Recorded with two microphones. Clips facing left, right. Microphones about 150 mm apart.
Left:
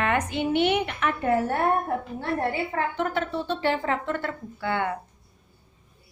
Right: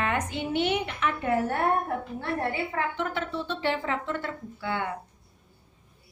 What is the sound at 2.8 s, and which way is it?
A woman's voice, 45° left (ahead or behind).